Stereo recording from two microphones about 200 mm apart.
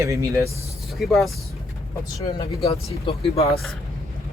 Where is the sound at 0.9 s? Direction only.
Centre (ahead or behind).